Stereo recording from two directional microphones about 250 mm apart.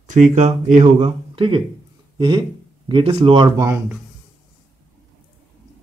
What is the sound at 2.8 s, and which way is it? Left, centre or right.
Speech, right.